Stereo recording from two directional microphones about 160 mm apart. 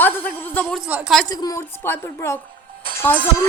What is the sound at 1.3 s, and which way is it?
A woman's voice, 25° left (ahead or behind).